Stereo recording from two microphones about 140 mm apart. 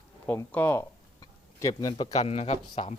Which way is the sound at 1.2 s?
25° left (ahead or behind).